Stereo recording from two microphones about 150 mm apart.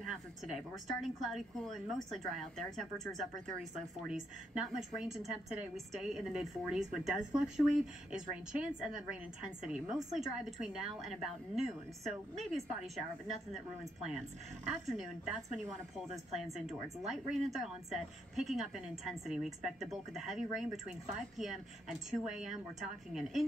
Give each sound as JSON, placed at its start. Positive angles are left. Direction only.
{"t": 0.1, "sound": "a woman's voice", "side_deg": 0}
{"t": 14.7, "sound": "a woman's voice", "side_deg": 0}